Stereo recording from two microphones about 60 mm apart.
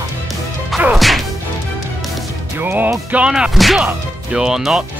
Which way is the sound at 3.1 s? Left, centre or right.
Centre.